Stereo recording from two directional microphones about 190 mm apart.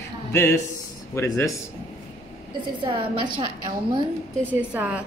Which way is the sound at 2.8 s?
25° right (ahead or behind).